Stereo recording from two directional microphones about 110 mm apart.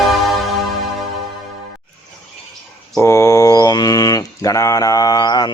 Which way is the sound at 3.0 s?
25° left (ahead or behind).